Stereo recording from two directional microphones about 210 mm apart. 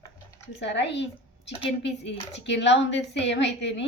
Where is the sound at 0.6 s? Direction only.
55° left (ahead or behind).